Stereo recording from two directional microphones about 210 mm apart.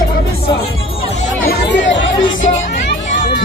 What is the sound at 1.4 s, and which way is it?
Chatter, 55° left (ahead or behind).